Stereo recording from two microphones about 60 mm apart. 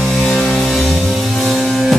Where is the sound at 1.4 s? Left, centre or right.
Centre.